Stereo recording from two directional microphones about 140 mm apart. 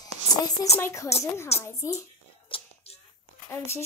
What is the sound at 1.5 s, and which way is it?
Speech, 50° left (ahead or behind).